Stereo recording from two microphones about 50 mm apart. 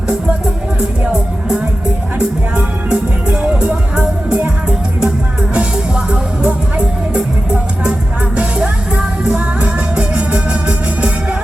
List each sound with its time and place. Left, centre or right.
0.8 s speech: centre
2.1 s music: right
5.5 s music: centre